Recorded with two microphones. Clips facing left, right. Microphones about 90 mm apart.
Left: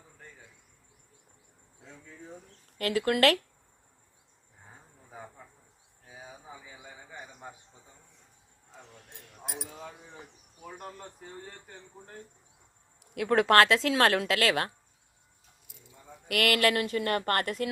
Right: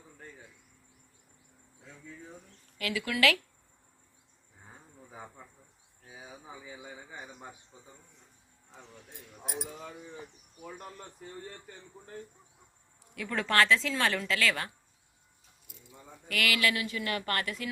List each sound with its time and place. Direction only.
2.7 s speech: 50° left (ahead or behind)
10.7 s speech: 25° left (ahead or behind)
13.1 s a woman's voice: 65° left (ahead or behind)
16.3 s speech: 55° left (ahead or behind)